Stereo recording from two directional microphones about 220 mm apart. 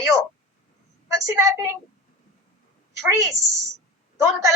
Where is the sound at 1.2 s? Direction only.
15° right (ahead or behind).